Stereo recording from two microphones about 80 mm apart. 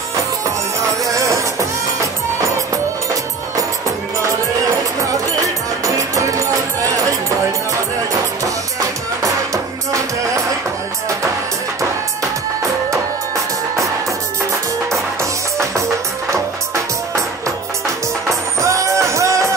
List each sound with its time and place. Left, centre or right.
1.1 s music: right
5.9 s music: right
8.7 s music: right
18.6 s music: right